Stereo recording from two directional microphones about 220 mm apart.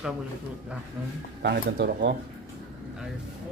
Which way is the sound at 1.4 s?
45° right (ahead or behind).